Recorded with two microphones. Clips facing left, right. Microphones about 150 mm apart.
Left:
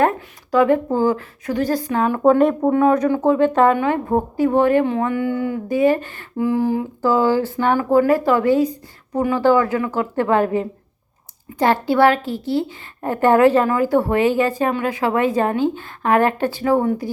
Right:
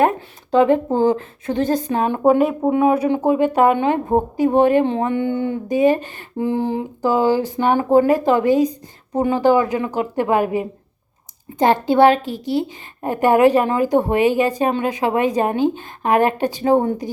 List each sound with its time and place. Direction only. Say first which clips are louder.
0.2 s a woman's voice: right 1 dB; 25° right (ahead or behind)
2.4 s a woman's voice: left 1 dB; 5° right (ahead or behind); by 17.1 s 25° right (ahead or behind)